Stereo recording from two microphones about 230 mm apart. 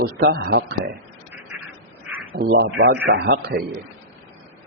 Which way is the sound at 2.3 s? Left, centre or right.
Right.